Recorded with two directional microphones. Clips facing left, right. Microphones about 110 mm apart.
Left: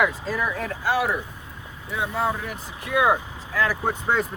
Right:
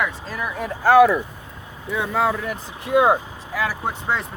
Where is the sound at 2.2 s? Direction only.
90° right.